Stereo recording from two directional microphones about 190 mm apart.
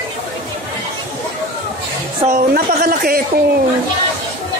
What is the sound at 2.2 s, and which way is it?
Speech, 50° right (ahead or behind).